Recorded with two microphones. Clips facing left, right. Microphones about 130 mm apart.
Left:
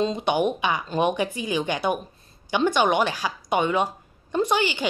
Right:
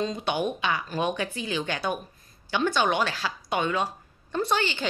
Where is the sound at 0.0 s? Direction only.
20° left (ahead or behind).